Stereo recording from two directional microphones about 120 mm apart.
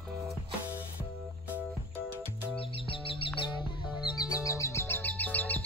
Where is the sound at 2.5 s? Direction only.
50° left (ahead or behind).